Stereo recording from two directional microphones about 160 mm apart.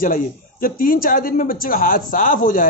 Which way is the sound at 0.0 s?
60° left (ahead or behind).